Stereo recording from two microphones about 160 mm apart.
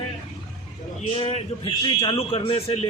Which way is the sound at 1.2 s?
40° left (ahead or behind).